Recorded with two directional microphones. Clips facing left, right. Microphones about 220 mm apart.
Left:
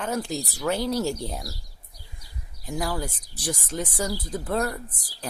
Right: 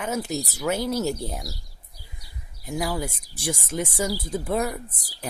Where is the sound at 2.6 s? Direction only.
10° right (ahead or behind).